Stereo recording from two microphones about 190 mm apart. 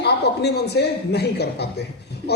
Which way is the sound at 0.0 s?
60° left (ahead or behind).